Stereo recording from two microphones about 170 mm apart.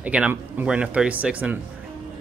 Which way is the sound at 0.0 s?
10° right (ahead or behind).